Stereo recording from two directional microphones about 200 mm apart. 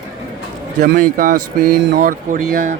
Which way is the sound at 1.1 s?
40° right (ahead or behind).